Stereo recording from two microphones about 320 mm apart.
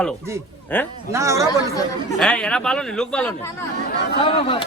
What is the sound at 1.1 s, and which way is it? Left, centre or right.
Speech, centre.